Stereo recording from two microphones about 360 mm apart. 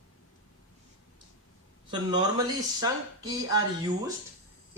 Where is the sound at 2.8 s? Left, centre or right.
Centre.